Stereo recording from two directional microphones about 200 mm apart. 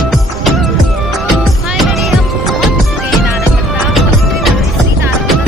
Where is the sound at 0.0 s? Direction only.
Centre (ahead or behind).